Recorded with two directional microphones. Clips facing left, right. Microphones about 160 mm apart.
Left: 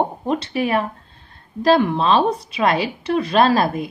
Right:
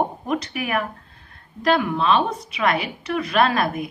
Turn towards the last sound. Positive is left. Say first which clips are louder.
# left 4 dB
turn(degrees=30)  # may be behind; listen again after turning